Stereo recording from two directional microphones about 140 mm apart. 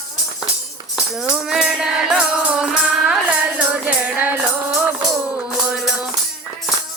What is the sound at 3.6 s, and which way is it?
Music, 10° right (ahead or behind).